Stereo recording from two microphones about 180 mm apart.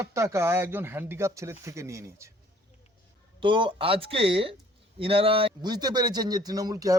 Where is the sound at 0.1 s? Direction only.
15° right (ahead or behind).